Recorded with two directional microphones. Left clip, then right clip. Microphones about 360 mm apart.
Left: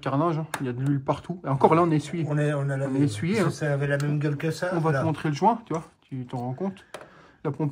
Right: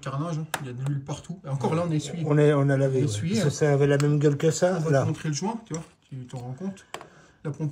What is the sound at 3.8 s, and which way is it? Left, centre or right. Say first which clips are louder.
Speech: right 5 dB; centre.